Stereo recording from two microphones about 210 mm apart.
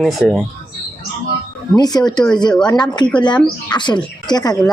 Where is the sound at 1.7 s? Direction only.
20° left (ahead or behind).